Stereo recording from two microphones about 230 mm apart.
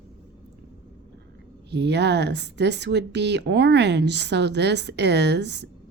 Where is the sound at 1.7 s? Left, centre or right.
Right.